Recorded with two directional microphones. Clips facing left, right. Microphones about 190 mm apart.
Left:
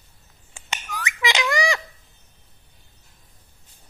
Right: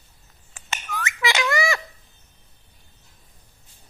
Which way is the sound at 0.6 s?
15° left (ahead or behind).